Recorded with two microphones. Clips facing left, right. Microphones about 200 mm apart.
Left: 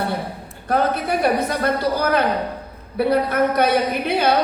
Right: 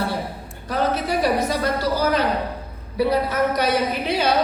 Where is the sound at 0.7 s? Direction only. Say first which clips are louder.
Left 2 dB; 55° left (ahead or behind).